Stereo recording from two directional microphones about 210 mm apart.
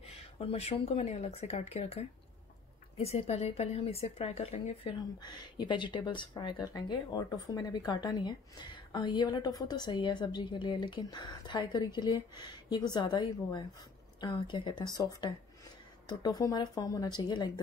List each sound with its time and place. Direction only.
0.1 s speech: 30° left (ahead or behind)